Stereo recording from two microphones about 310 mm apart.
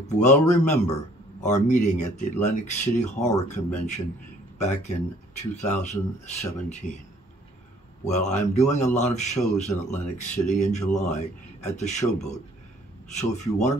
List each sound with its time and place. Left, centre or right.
0.0 s a man's voice: left
8.0 s a man's voice: left